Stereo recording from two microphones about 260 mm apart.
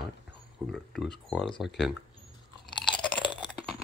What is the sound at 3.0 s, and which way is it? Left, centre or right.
Chewing, centre.